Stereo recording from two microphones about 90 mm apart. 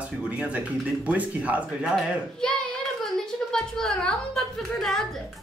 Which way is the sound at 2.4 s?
10° left (ahead or behind).